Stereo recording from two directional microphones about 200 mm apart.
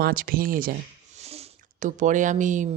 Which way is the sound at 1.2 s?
30° right (ahead or behind).